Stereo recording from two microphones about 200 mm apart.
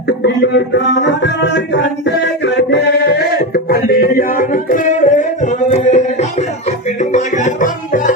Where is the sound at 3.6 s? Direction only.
45° left (ahead or behind).